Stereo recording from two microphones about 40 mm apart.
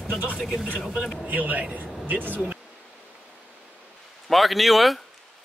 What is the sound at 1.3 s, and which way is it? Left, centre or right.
Speech, right.